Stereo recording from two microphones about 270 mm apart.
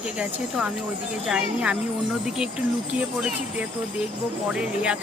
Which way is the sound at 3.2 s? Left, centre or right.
Centre.